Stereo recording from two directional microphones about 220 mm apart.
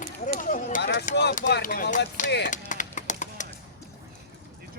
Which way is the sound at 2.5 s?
35° left (ahead or behind).